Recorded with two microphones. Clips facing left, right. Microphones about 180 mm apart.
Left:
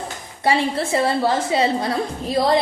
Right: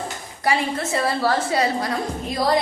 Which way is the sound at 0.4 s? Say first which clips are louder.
Left 3 dB; 30° left (ahead or behind).